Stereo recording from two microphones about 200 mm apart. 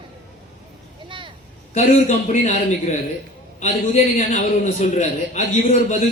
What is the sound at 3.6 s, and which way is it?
A man's voice, 35° left (ahead or behind).